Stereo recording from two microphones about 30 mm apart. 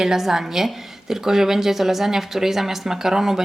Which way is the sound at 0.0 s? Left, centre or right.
Centre.